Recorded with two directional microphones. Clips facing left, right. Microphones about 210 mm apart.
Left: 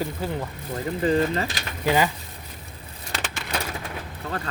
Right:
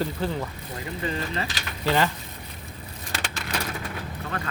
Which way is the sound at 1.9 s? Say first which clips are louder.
Left 2 dB; 10° left (ahead or behind).